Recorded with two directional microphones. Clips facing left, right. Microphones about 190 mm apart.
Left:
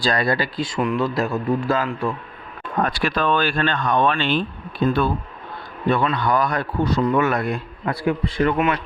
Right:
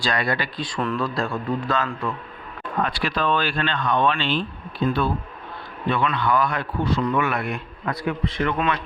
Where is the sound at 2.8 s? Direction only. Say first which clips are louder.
Left 3 dB; 45° left (ahead or behind).